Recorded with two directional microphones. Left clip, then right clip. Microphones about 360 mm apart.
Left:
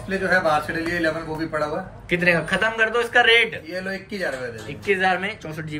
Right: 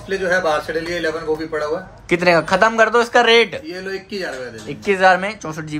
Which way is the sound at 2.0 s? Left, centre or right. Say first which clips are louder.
Right 5 dB; centre.